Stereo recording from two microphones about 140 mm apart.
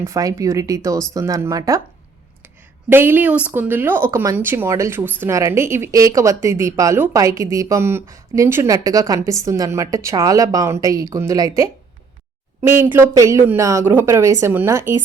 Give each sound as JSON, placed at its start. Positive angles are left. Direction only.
{"t": 0.0, "sound": "speech", "side_deg": -25}
{"t": 2.9, "sound": "speech", "side_deg": -15}